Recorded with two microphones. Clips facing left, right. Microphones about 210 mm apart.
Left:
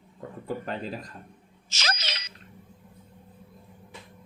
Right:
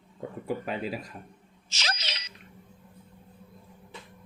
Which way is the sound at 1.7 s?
45° left (ahead or behind).